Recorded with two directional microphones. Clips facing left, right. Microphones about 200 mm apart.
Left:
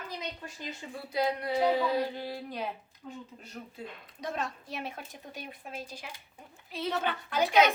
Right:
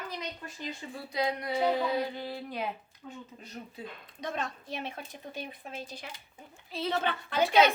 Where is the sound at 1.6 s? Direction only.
10° left (ahead or behind).